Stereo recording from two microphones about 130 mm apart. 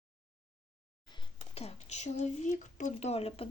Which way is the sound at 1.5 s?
55° left (ahead or behind).